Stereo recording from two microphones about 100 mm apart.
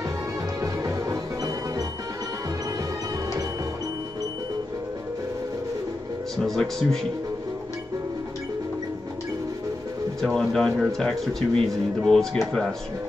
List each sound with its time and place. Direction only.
0.6 s music: 35° right (ahead or behind)
6.3 s speech: centre (ahead or behind)
10.2 s speech: 5° left (ahead or behind)